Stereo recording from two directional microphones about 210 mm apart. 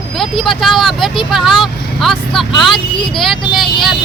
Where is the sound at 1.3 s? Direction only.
Centre (ahead or behind).